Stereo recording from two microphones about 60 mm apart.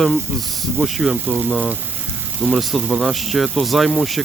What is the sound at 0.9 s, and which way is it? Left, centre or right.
Speech, centre.